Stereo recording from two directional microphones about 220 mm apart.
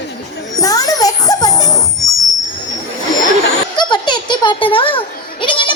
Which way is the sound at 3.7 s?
20° left (ahead or behind).